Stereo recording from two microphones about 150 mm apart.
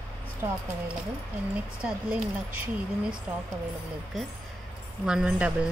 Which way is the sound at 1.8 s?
5° right (ahead or behind).